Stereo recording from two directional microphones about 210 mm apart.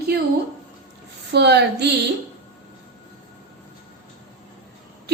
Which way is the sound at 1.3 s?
55° right (ahead or behind).